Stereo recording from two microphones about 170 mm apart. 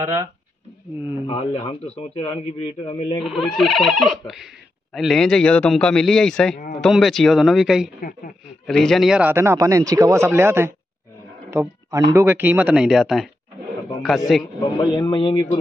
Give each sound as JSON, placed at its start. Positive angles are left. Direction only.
{"t": 1.2, "sound": "a man's voice", "side_deg": 35}
{"t": 3.2, "sound": "a man's voice", "side_deg": 0}
{"t": 14.6, "sound": "a man's voice", "side_deg": 25}